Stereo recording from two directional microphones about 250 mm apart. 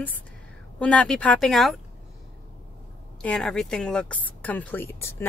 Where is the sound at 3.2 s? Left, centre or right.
Centre.